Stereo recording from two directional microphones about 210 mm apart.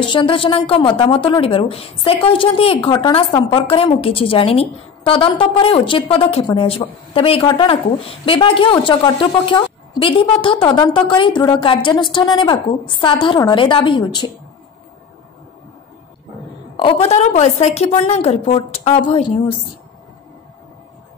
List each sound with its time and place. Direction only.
0.1 s a woman's voice: 25° left (ahead or behind)
16.7 s a woman's voice: 25° left (ahead or behind)